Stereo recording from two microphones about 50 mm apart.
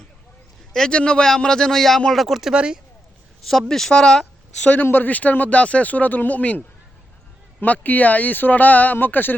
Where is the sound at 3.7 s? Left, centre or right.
Centre.